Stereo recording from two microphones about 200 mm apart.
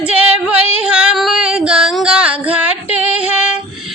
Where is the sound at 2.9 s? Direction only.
5° right (ahead or behind).